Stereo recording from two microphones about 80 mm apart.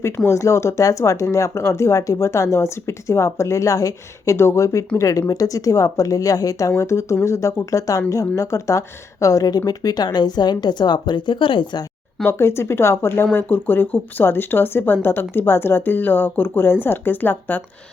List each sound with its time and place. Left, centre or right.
0.3 s a woman's voice: left
12.2 s speech: left